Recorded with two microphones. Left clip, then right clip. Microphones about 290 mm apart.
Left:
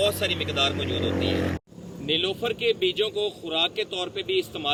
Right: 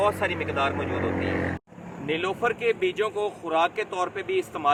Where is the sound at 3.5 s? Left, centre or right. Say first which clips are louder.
Right 4 dB; right.